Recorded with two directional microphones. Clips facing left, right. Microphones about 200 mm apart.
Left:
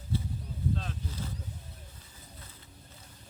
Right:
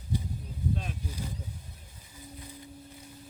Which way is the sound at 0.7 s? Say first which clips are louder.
Right 1 dB; 15° right (ahead or behind).